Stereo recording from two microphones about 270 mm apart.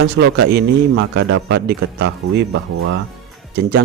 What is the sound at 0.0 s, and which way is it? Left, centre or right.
A man's voice, right.